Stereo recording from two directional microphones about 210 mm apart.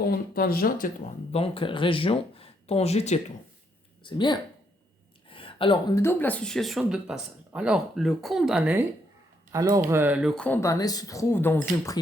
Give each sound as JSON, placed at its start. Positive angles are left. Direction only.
{"t": 0.1, "sound": "speech", "side_deg": 45}
{"t": 1.3, "sound": "speech", "side_deg": 25}
{"t": 4.0, "sound": "speech", "side_deg": 20}
{"t": 5.3, "sound": "a sound", "side_deg": 25}
{"t": 6.0, "sound": "speech", "side_deg": 10}